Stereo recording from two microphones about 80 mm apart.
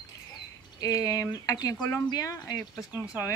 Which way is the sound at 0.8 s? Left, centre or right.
Left.